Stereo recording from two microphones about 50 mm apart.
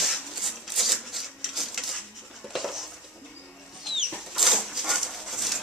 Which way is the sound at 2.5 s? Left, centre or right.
Centre.